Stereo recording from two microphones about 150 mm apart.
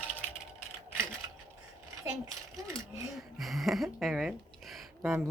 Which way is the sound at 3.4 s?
Centre (ahead or behind).